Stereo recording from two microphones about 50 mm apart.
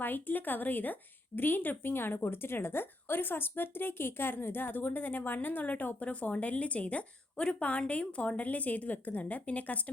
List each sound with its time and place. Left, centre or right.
0.0 s a woman's voice: left